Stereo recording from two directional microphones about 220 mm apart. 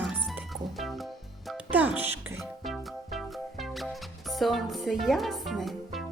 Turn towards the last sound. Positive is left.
turn(degrees=0)  # may be behind; listen again after turning